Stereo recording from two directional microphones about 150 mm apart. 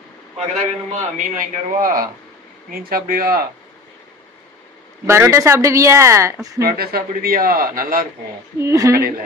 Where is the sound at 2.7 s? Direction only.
75° right (ahead or behind).